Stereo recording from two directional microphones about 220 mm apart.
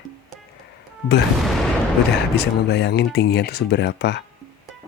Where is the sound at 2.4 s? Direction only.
50° left (ahead or behind).